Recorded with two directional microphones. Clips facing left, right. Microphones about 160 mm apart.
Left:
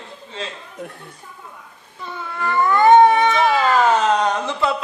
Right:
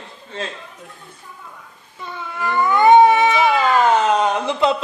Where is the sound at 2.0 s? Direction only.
Centre (ahead or behind).